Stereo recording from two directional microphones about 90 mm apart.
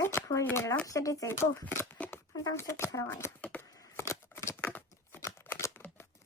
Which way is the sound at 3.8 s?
30° left (ahead or behind).